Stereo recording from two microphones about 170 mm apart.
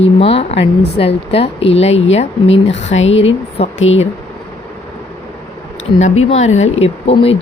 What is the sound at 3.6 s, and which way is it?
Speech, 35° left (ahead or behind).